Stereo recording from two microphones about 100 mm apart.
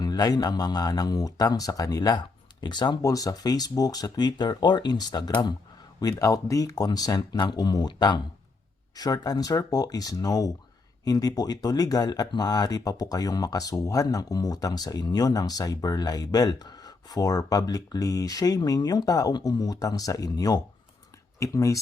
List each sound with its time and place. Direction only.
0.0 s speech: 40° left (ahead or behind)
3.0 s speech: 35° left (ahead or behind)